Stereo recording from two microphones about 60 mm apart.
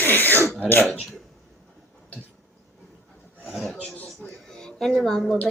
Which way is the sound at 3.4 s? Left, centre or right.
Centre.